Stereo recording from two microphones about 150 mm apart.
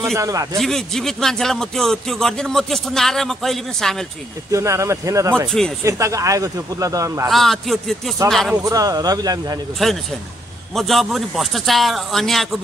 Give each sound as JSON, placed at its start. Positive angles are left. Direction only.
{"t": 0.1, "sound": "speech", "side_deg": -20}
{"t": 0.6, "sound": "speech", "side_deg": 0}
{"t": 4.5, "sound": "speech", "side_deg": -20}
{"t": 7.2, "sound": "speech", "side_deg": 0}
{"t": 8.6, "sound": "speech", "side_deg": -25}
{"t": 9.8, "sound": "speech", "side_deg": 0}